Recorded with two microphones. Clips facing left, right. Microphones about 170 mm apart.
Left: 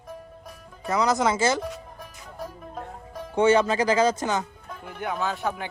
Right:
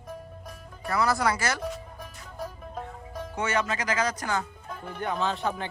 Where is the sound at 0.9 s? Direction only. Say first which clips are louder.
Left 3 dB; 20° left (ahead or behind).